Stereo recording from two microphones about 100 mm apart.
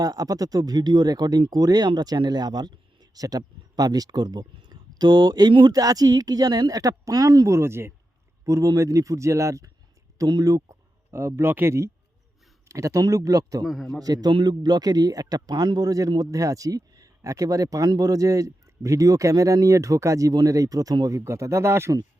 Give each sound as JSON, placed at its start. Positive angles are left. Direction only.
{"t": 0.0, "sound": "speech", "side_deg": -35}
{"t": 5.8, "sound": "speech", "side_deg": -40}
{"t": 13.7, "sound": "a man's voice", "side_deg": 0}
{"t": 14.0, "sound": "speech", "side_deg": -40}